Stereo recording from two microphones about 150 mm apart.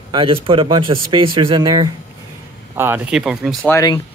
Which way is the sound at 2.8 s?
10° right (ahead or behind).